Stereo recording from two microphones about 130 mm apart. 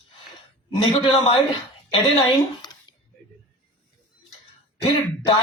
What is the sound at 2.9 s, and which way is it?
Single-lens reflex camera, 35° left (ahead or behind).